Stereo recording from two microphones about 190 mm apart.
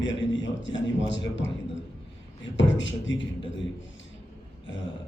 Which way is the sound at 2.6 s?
75° left (ahead or behind).